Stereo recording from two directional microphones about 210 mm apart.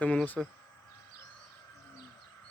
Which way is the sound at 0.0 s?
5° left (ahead or behind).